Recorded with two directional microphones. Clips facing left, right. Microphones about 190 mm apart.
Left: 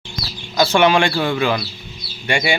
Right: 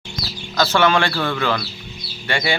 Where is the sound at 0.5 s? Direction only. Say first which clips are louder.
Left 3 dB; 15° left (ahead or behind).